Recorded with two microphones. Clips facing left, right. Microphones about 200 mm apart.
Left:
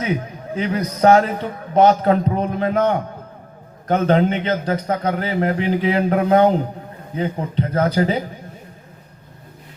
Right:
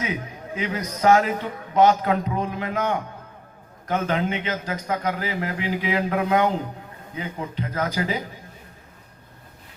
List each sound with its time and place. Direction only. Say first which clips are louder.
0.0 s a man's voice: left 6 dB; 30° left (ahead or behind)